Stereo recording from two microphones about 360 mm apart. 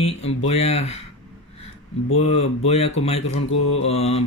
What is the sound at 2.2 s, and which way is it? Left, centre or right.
Speech, centre.